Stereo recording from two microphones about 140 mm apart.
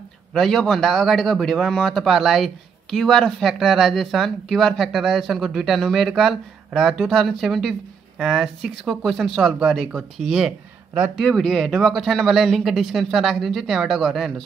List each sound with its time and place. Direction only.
0.3 s speech: centre (ahead or behind)